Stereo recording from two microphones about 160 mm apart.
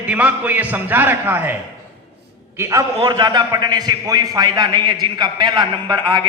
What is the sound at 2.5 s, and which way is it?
A man's voice, 20° right (ahead or behind).